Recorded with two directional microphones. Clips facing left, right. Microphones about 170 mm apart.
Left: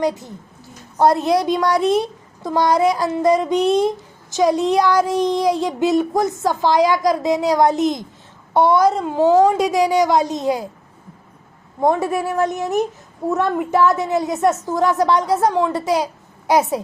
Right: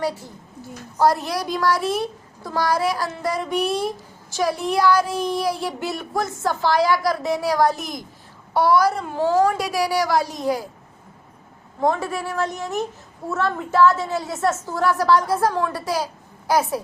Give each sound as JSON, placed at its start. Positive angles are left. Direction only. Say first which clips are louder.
{"t": 0.0, "sound": "a woman's voice", "louder": "left 5 dB", "side_deg": 20}
{"t": 11.8, "sound": "a woman's voice", "louder": "left 4 dB", "side_deg": 20}